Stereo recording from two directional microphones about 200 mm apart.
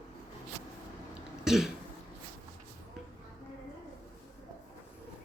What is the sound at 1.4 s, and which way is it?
Throat clearing, centre (ahead or behind).